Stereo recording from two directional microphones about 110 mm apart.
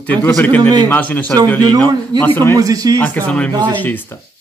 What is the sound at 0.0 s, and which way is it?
Speech, 15° left (ahead or behind).